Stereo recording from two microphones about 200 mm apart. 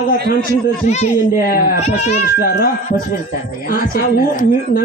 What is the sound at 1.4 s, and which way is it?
A woman's voice, 50° left (ahead or behind).